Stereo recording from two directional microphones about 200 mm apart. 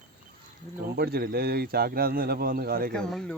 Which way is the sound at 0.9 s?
50° right (ahead or behind).